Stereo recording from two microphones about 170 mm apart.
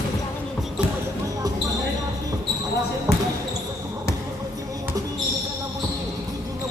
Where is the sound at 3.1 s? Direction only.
70° left (ahead or behind).